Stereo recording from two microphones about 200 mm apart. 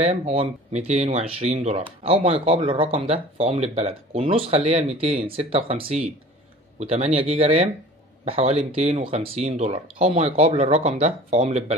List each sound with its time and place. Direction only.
0.0 s speech: 30° right (ahead or behind)